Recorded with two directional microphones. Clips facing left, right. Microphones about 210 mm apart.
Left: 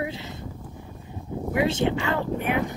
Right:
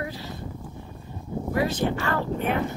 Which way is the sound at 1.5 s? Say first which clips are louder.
Left 2 dB; 20° left (ahead or behind).